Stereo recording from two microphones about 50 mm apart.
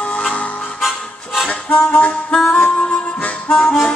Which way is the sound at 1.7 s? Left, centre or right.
Left.